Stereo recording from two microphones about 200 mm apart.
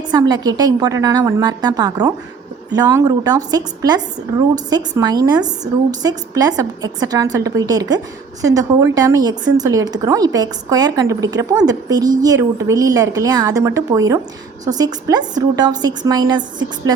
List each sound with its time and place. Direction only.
0.1 s a woman's voice: 20° right (ahead or behind)